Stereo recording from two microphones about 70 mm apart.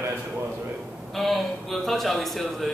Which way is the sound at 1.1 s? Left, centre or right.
Centre.